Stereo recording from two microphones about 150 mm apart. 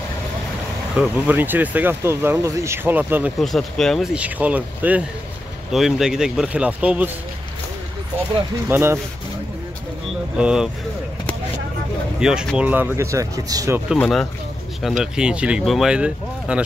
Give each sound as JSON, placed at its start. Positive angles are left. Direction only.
{"t": 0.9, "sound": "speech", "side_deg": -10}
{"t": 3.3, "sound": "speech", "side_deg": 0}
{"t": 8.6, "sound": "speech", "side_deg": -15}
{"t": 10.4, "sound": "speech", "side_deg": -5}
{"t": 12.2, "sound": "speech", "side_deg": -5}
{"t": 13.9, "sound": "speech", "side_deg": 5}